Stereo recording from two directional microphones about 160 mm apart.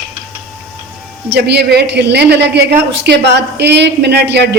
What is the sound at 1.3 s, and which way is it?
A woman's voice, 90° right.